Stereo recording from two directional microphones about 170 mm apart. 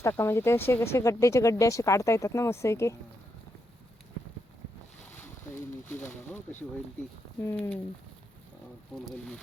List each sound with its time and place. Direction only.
0.0 s speech: 15° left (ahead or behind)
7.4 s speech: 10° left (ahead or behind)
8.9 s speech: 5° left (ahead or behind)